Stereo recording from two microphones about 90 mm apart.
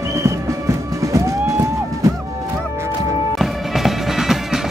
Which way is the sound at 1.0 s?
35° right (ahead or behind).